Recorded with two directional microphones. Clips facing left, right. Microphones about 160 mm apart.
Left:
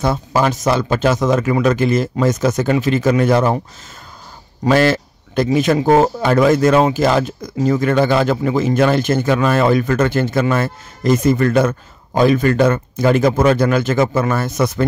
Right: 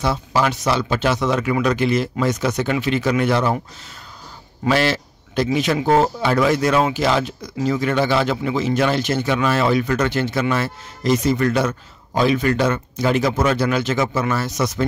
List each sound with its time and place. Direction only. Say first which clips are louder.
0.0 s a man's voice: left 3 dB; 50° left (ahead or behind)
4.6 s a man's voice: left 5 dB; 45° left (ahead or behind)